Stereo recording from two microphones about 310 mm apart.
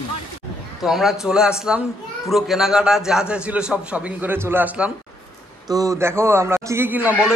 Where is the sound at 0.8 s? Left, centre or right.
Centre.